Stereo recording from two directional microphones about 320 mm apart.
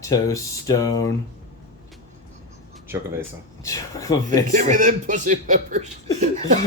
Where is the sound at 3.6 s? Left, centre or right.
Centre.